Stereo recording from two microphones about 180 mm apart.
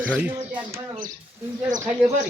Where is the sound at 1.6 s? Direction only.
45° right (ahead or behind).